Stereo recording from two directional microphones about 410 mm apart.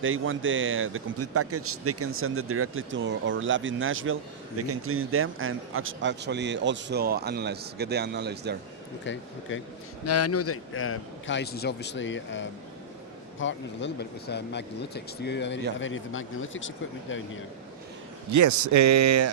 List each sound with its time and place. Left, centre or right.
0.0 s speech: right
9.1 s a man's voice: left
18.3 s speech: right